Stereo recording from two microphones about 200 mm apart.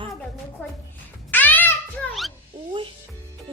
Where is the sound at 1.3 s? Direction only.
10° left (ahead or behind).